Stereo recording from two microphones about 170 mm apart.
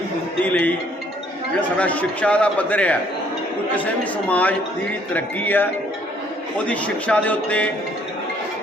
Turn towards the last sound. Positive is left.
turn(degrees=10)  # may be behind; listen again after turning